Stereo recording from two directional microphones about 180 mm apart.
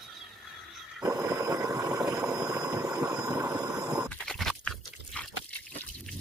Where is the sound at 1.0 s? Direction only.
20° right (ahead or behind).